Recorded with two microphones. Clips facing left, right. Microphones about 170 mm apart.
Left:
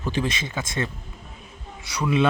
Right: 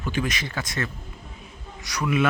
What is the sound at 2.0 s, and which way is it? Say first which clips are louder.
Speech: left 2 dB; 25° left (ahead or behind).